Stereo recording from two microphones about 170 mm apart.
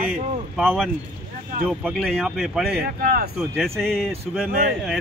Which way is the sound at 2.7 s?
65° right (ahead or behind).